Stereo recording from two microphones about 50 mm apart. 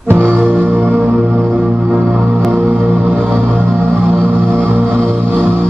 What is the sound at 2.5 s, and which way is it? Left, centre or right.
Music, right.